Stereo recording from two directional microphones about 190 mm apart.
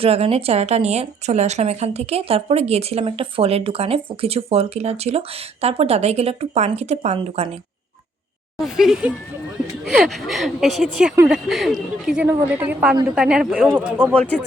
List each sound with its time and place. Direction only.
0.0 s speech: 30° right (ahead or behind)
8.5 s a woman's voice: centre (ahead or behind)